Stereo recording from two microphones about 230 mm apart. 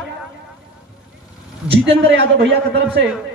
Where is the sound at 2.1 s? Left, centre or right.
Right.